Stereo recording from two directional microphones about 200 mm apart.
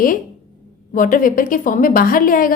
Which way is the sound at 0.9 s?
40° left (ahead or behind).